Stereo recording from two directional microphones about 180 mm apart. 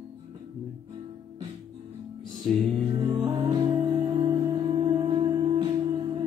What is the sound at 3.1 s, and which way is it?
Music, 20° right (ahead or behind).